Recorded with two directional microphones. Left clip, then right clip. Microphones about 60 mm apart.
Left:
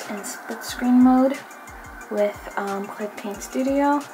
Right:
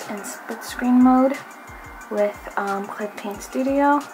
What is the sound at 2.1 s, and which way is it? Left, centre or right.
Speech, left.